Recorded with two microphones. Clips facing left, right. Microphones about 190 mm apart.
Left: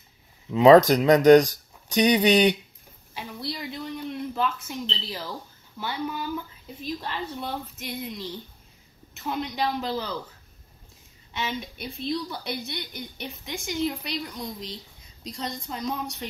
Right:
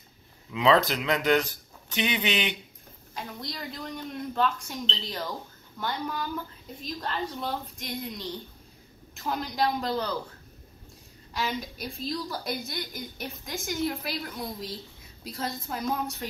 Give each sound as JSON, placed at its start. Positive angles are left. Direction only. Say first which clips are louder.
{"t": 0.5, "sound": "speech", "louder": "left 9 dB", "side_deg": 45}
{"t": 3.2, "sound": "a woman's voice", "louder": "left 3 dB", "side_deg": 5}
{"t": 11.3, "sound": "a woman's voice", "louder": "even", "side_deg": 0}